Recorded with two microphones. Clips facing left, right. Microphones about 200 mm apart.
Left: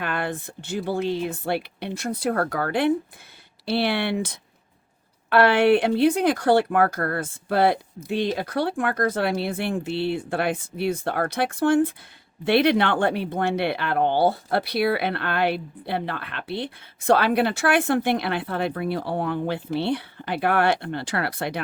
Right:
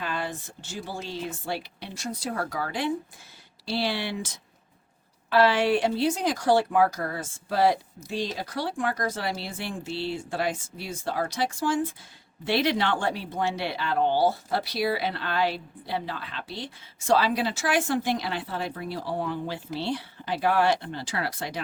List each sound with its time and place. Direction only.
0.0 s speech: 60° left (ahead or behind)